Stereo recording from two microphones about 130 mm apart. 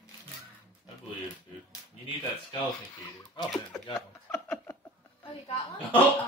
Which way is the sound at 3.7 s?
20° left (ahead or behind).